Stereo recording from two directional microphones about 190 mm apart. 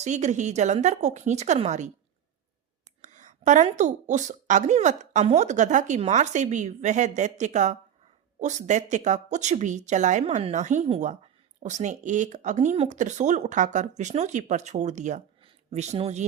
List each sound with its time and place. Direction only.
0.0 s a woman's voice: 40° right (ahead or behind)
3.0 s a woman's voice: 40° right (ahead or behind)